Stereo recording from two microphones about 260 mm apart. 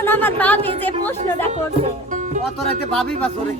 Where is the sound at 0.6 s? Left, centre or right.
Right.